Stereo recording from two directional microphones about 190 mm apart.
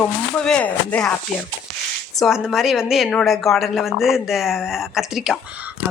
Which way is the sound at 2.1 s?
Centre (ahead or behind).